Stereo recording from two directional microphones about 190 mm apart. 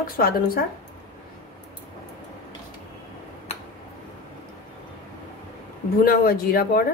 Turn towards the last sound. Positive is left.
turn(degrees=50)  # may be behind; listen again after turning